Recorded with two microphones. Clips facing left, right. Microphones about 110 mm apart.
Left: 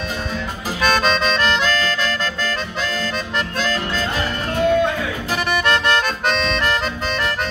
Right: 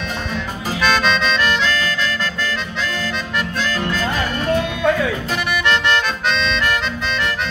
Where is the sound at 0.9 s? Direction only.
40° left (ahead or behind).